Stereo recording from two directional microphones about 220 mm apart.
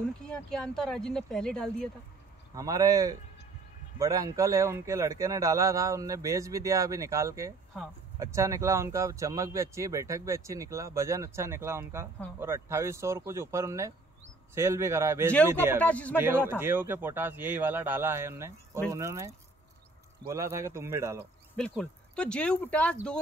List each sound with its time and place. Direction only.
0.2 s speech: 5° left (ahead or behind)
2.5 s speech: 15° right (ahead or behind)
15.8 s speech: 5° left (ahead or behind)
16.4 s speech: 10° right (ahead or behind)
21.5 s speech: 5° left (ahead or behind)